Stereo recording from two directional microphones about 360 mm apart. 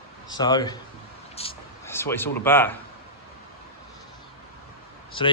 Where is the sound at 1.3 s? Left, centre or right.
Centre.